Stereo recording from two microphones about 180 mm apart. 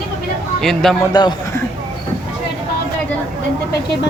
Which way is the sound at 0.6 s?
Centre (ahead or behind).